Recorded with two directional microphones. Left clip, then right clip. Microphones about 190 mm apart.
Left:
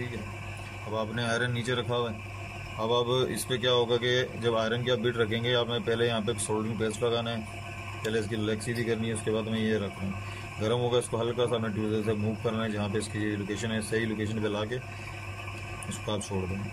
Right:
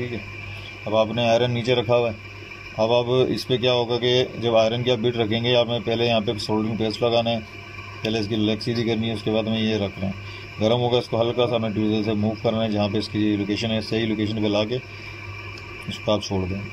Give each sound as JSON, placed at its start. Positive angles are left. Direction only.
{"t": 0.9, "sound": "a man's voice", "side_deg": -5}
{"t": 10.6, "sound": "speech", "side_deg": -5}
{"t": 16.1, "sound": "speech", "side_deg": 0}